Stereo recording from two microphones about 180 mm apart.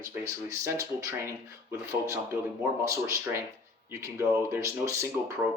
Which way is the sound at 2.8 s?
15° right (ahead or behind).